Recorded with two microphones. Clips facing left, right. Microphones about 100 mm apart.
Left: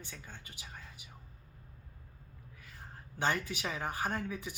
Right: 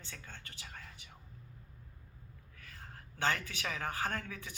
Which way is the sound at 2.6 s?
15° left (ahead or behind).